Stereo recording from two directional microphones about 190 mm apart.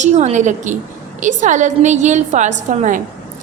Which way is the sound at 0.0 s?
35° right (ahead or behind).